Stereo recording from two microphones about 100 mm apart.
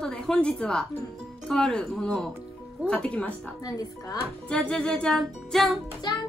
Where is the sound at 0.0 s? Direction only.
10° left (ahead or behind).